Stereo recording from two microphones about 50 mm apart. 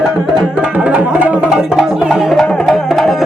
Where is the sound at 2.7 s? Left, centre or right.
Centre.